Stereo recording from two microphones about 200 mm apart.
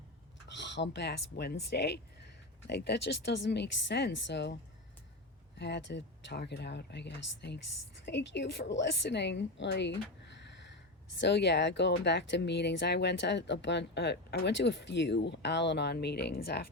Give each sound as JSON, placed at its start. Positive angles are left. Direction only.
{"t": 0.5, "sound": "speech", "side_deg": 60}
{"t": 5.5, "sound": "speech", "side_deg": 60}
{"t": 11.2, "sound": "speech", "side_deg": 60}